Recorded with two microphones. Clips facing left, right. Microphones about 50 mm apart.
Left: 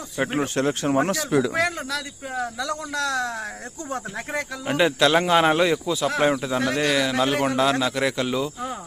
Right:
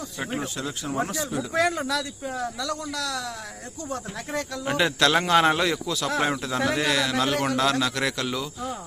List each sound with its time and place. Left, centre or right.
0.2 s a man's voice: left
0.5 s speech: left
1.1 s speech: left
1.5 s speech: centre
2.3 s speech: centre
2.6 s a man's voice: left
4.4 s a man's voice: centre
6.1 s a man's voice: centre